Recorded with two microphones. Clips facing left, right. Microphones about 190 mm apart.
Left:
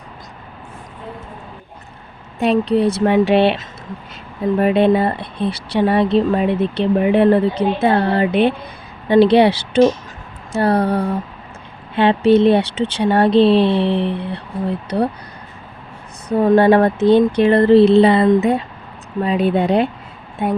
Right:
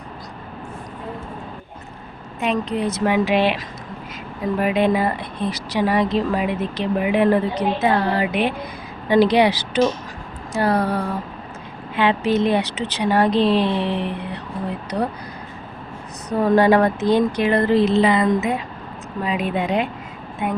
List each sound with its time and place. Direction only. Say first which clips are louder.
2.4 s speech: left 7 dB; 35° left (ahead or behind)
16.4 s speech: left 3 dB; 30° left (ahead or behind)